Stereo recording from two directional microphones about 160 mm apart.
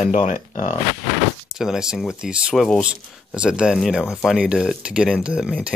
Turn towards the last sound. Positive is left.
turn(degrees=-5)  # may be behind; listen again after turning